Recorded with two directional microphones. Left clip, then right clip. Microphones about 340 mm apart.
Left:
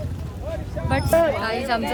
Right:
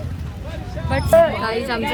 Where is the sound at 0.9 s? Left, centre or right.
Centre.